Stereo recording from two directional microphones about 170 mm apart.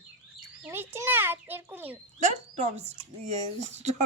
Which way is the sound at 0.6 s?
15° right (ahead or behind).